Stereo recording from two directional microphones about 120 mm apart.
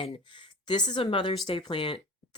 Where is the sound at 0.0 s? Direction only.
45° left (ahead or behind).